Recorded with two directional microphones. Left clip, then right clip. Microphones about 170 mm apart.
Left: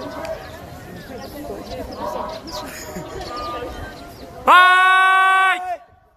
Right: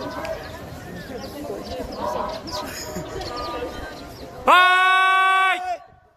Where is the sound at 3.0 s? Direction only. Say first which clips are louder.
Left 2 dB; 20° right (ahead or behind).